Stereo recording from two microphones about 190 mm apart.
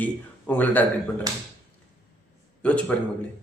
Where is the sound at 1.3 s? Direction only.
20° right (ahead or behind).